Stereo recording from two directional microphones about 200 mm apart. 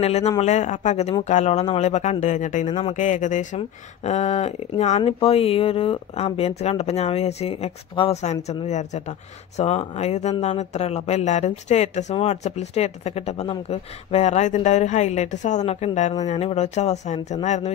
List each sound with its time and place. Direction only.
0.0 s speech: 30° left (ahead or behind)